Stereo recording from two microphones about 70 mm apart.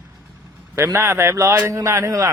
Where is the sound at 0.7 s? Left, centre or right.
Right.